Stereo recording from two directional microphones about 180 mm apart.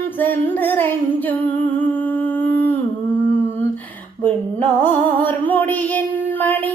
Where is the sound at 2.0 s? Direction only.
10° left (ahead or behind).